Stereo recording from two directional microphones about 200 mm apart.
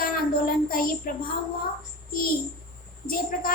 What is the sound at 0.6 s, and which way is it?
Speech, 45° left (ahead or behind).